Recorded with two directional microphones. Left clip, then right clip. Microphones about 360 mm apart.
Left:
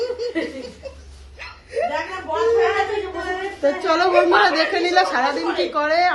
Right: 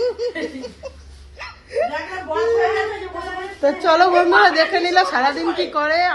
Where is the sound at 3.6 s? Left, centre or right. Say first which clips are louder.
Right 4 dB; centre.